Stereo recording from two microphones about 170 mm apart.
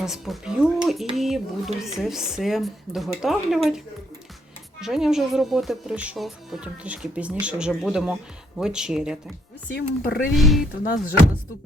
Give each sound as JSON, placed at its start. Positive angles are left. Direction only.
{"t": 0.0, "sound": "speech", "side_deg": 0}
{"t": 4.8, "sound": "speech", "side_deg": 0}
{"t": 9.7, "sound": "speech", "side_deg": 70}
{"t": 10.3, "sound": "speech", "side_deg": 0}